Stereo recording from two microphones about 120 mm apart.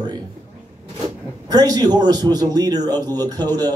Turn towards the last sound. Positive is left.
turn(degrees=-35)  # may be behind; listen again after turning